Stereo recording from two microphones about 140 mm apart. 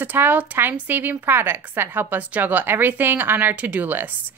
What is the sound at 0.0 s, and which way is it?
A woman's voice, 15° right (ahead or behind).